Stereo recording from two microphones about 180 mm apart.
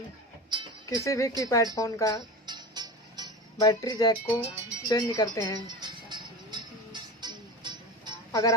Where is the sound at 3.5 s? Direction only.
20° left (ahead or behind).